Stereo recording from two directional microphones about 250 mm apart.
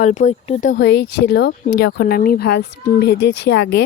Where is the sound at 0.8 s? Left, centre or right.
Left.